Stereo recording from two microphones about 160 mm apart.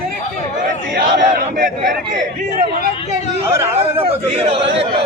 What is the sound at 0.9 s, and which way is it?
Speech, 70° right (ahead or behind).